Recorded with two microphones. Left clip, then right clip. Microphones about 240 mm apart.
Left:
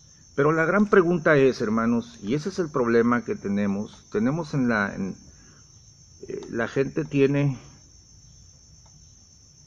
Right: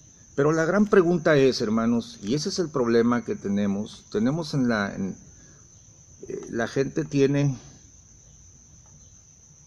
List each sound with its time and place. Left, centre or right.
0.4 s speech: centre
6.2 s speech: centre